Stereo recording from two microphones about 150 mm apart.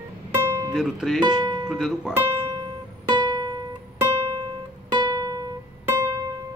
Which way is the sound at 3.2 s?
25° right (ahead or behind).